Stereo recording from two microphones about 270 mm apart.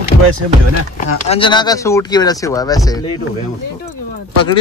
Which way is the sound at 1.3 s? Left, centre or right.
Centre.